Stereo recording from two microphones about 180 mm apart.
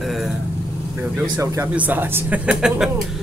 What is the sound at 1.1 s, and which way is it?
Speech, 10° right (ahead or behind).